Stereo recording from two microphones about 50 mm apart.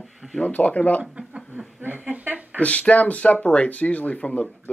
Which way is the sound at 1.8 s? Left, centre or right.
Right.